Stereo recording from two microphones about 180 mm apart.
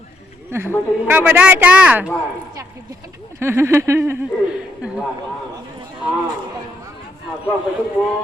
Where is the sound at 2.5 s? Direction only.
20° right (ahead or behind).